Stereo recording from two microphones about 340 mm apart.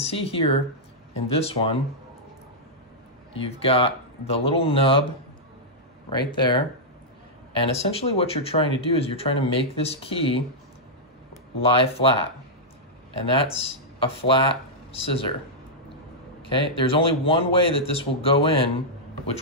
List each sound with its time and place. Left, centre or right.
0.0 s speech: centre
3.3 s speech: centre
6.0 s speech: centre
7.6 s speech: centre
11.6 s speech: centre
13.3 s speech: centre
16.4 s speech: centre